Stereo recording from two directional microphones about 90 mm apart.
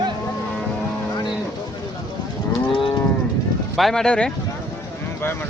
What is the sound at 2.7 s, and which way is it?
Moo, 80° left.